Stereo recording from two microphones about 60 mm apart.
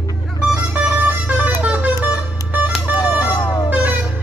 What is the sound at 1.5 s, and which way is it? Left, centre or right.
Music, right.